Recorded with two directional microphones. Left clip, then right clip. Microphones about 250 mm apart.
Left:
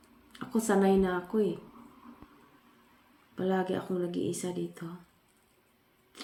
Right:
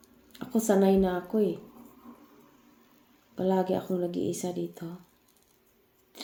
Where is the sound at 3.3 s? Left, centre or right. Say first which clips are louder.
Right 4 dB; centre.